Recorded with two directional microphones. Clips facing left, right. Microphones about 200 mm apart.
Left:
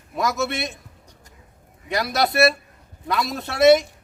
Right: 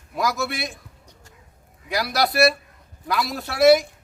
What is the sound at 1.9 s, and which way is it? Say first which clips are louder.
A man's voice: left 1 dB; centre (ahead or behind).